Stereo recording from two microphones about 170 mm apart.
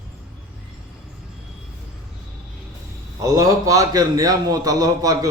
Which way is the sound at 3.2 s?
20° right (ahead or behind).